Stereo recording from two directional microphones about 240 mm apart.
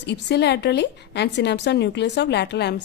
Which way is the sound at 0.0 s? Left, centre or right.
Left.